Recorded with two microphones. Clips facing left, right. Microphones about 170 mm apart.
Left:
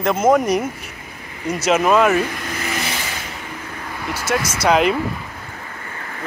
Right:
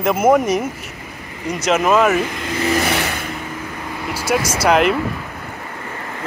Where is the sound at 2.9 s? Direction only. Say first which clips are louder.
Right 7 dB; 60° right (ahead or behind).